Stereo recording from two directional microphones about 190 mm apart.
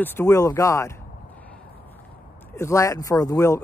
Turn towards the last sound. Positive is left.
turn(degrees=15)  # may be behind; listen again after turning